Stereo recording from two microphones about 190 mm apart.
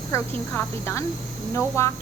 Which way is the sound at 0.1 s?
15° left (ahead or behind).